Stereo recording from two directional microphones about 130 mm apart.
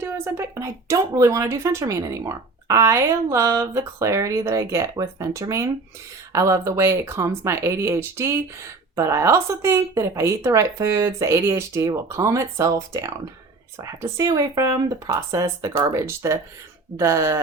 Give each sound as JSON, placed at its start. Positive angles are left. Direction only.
{"t": 0.0, "sound": "speech", "side_deg": -20}